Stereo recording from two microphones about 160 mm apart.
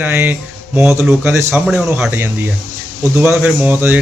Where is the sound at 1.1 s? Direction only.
5° right (ahead or behind).